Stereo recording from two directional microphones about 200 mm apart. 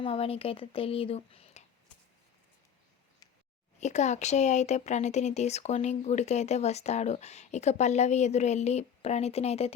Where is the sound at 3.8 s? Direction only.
35° left (ahead or behind).